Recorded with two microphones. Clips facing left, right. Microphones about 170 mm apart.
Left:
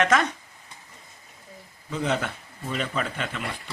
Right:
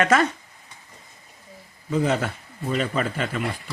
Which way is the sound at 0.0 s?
10° right (ahead or behind).